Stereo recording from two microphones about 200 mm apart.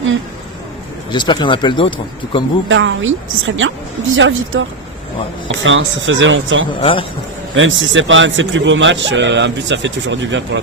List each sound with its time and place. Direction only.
1.1 s speech: 20° left (ahead or behind)
2.6 s a man's voice: 70° right (ahead or behind)
6.7 s speech: 25° left (ahead or behind)
7.5 s a man's voice: 70° right (ahead or behind)